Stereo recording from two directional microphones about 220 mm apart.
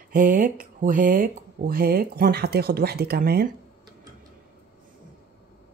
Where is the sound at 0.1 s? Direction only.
40° right (ahead or behind).